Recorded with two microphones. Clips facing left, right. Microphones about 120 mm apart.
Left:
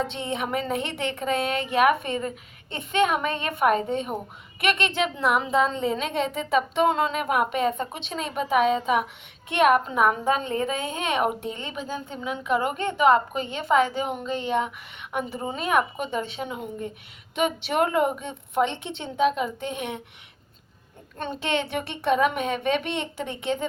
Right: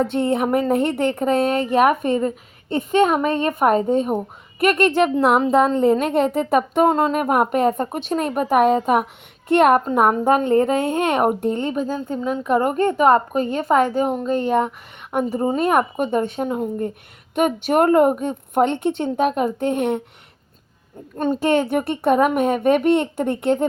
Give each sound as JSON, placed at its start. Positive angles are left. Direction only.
{"t": 0.0, "sound": "a woman's voice", "side_deg": -55}
{"t": 11.7, "sound": "a woman's voice", "side_deg": -40}
{"t": 21.2, "sound": "a woman's voice", "side_deg": -40}